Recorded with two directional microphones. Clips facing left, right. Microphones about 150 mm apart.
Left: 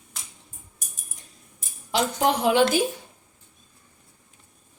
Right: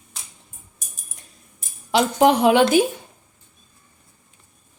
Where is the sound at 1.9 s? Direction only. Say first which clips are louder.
Right 6 dB; 70° right (ahead or behind).